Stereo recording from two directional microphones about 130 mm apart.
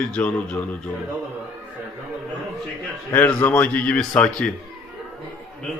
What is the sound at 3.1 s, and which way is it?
Speech, 15° left (ahead or behind).